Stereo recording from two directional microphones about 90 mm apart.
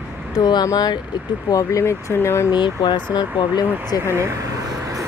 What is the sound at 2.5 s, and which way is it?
Speech, 55° left (ahead or behind).